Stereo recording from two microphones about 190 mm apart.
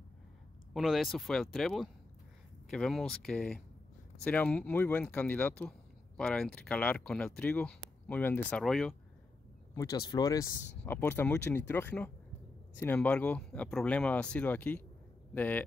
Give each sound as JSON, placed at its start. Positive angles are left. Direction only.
{"t": 0.7, "sound": "speech", "side_deg": 0}
{"t": 9.8, "sound": "speech", "side_deg": 20}